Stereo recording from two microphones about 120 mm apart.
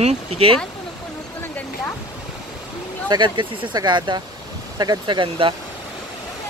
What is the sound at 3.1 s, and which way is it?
Speech, 40° right (ahead or behind).